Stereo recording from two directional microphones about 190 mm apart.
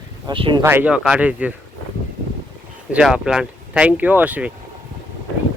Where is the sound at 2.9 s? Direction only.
5° right (ahead or behind).